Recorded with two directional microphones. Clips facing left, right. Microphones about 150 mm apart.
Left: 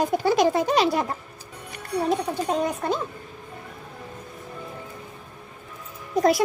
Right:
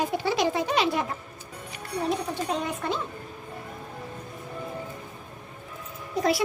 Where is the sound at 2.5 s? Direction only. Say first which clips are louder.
Left 5 dB; 40° left (ahead or behind).